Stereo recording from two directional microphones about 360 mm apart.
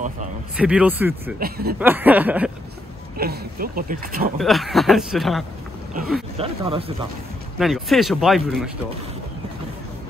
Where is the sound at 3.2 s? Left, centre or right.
Right.